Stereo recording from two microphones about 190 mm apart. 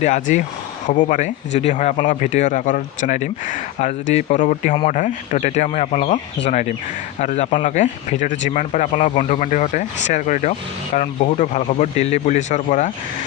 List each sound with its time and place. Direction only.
0.0 s speech: 40° left (ahead or behind)